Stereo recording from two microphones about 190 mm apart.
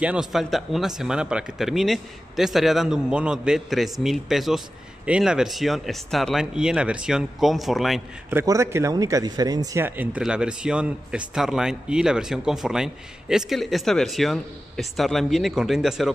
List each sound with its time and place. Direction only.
0.0 s speech: 5° right (ahead or behind)
8.4 s speech: 15° right (ahead or behind)